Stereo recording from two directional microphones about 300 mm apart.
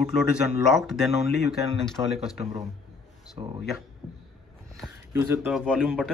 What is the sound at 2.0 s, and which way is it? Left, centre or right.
Speech, centre.